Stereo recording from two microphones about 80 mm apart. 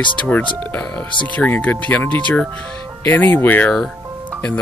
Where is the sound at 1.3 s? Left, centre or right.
Centre.